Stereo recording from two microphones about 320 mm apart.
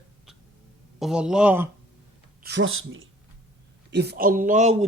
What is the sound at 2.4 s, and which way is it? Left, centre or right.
A man's voice, right.